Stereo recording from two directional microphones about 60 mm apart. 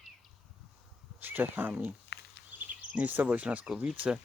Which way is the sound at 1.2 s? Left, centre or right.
Right.